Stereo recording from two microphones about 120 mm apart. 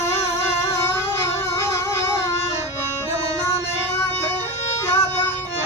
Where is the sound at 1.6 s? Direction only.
20° left (ahead or behind).